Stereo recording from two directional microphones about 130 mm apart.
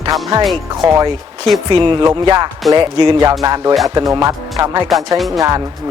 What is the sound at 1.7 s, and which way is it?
Speech, 40° right (ahead or behind).